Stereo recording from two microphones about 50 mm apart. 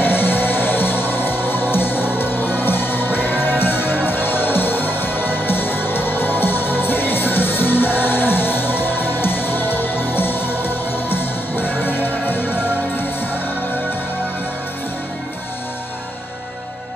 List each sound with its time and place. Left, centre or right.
0.0 s music: left